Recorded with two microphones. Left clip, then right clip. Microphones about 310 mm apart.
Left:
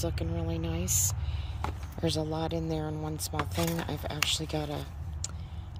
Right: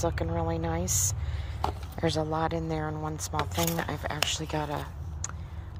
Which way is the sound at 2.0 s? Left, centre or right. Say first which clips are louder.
Right 3 dB; centre.